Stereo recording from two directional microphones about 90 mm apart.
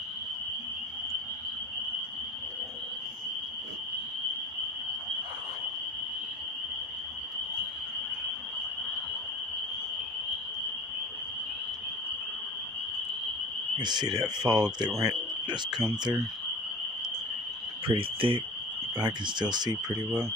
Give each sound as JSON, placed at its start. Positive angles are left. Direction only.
{"t": 13.7, "sound": "speech", "side_deg": -55}
{"t": 17.8, "sound": "speech", "side_deg": -80}
{"t": 18.9, "sound": "speech", "side_deg": -55}